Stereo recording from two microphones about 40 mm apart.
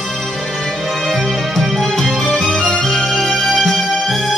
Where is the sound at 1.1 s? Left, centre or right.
Centre.